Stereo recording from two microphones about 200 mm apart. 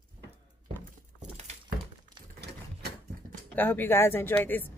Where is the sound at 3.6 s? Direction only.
10° left (ahead or behind).